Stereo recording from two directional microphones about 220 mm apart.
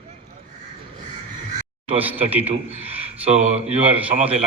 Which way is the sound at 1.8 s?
25° right (ahead or behind).